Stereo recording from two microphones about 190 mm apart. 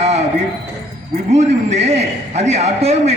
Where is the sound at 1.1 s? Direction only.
35° right (ahead or behind).